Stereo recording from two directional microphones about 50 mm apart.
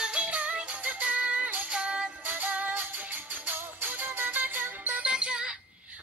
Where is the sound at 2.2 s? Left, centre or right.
Right.